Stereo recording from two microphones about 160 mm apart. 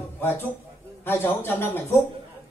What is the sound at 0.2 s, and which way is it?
A man's voice, 15° left (ahead or behind).